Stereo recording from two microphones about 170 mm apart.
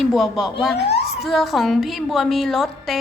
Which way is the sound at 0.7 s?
75° left (ahead or behind).